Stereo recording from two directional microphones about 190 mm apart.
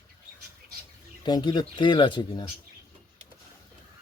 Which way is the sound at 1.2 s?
25° left (ahead or behind).